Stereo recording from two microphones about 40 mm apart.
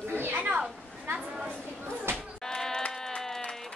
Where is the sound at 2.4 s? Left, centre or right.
Centre.